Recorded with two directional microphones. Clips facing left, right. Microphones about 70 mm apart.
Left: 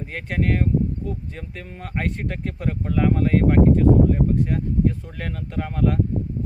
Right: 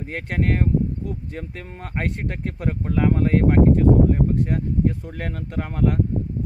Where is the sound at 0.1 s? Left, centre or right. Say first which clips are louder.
Even; right.